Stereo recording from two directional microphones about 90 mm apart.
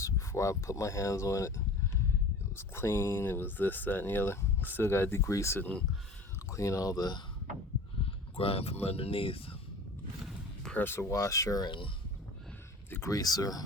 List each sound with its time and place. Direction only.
0.0 s speech: 35° left (ahead or behind)
8.4 s speech: 90° left
10.8 s speech: 25° left (ahead or behind)
11.6 s speech: 60° left (ahead or behind)
13.1 s speech: 45° left (ahead or behind)